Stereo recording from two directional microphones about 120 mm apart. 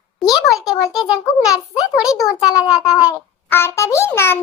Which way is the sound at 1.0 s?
5° right (ahead or behind).